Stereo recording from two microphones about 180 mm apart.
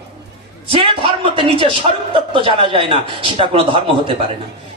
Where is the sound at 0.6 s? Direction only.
30° right (ahead or behind).